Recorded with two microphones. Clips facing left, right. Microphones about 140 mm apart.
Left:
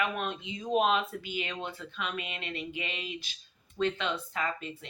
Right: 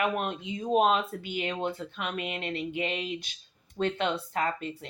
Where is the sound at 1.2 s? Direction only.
55° right (ahead or behind).